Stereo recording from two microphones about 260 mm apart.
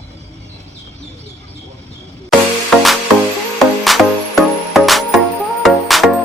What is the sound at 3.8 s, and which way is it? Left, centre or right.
Music, centre.